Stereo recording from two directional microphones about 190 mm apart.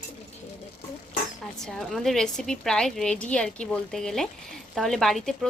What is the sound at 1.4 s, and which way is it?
A woman's voice, centre (ahead or behind).